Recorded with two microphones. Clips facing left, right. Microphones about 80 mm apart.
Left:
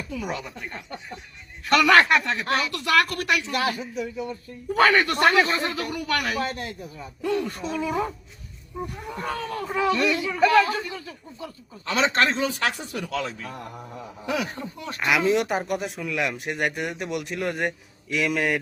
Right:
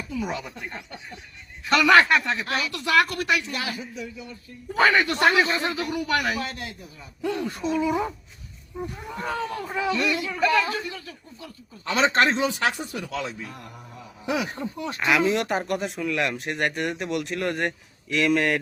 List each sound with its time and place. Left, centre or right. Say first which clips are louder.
0.2 s a man's voice: right 3 dB; centre
3.6 s speech: left 5 dB; left
4.7 s speech: left 1 dB; centre
6.4 s a man's voice: left 4 dB; left
7.3 s speech: even; centre
9.1 s speech: right 1 dB; centre
10.8 s a man's voice: left 1 dB; centre
11.9 s speech: right 1 dB; right; by 12.7 s centre
12.7 s speech: left 1 dB; centre
14.5 s speech: right 4 dB; right
15.4 s speech: left 1 dB; centre